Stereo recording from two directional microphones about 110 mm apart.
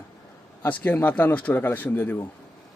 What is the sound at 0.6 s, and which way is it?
A man's voice, 15° left (ahead or behind).